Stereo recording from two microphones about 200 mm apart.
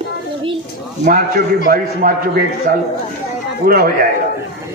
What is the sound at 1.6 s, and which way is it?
Speech, 45° right (ahead or behind).